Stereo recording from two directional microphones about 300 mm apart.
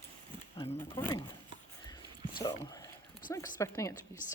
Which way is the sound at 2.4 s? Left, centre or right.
Centre.